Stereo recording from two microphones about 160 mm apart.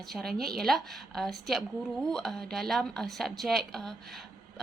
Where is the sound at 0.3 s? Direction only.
70° right (ahead or behind).